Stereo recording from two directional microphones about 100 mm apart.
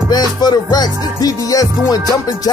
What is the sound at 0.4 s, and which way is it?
Music, 40° left (ahead or behind).